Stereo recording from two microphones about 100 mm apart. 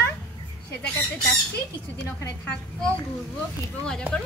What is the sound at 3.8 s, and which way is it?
Speech, 10° left (ahead or behind).